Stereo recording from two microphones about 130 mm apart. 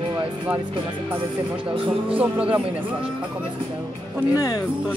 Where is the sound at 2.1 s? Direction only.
10° right (ahead or behind).